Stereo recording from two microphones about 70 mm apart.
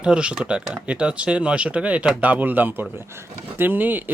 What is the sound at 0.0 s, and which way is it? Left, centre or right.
Speech, centre.